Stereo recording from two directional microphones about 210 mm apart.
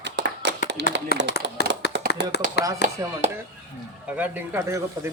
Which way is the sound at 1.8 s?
50° left (ahead or behind).